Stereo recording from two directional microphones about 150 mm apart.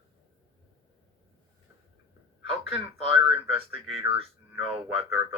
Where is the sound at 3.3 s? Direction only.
40° right (ahead or behind).